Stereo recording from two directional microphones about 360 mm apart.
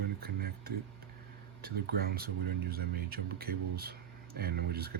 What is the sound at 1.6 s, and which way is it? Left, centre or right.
Speech, right.